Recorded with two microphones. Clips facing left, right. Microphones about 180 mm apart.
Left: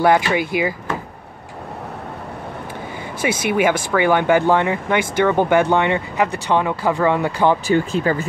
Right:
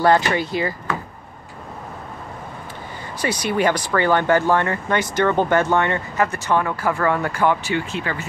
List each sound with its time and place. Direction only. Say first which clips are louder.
0.0 s speech: left 1 dB; 15° left (ahead or behind)
3.2 s speech: left 2 dB; 10° left (ahead or behind)
7.4 s speech: left 4 dB; 40° left (ahead or behind)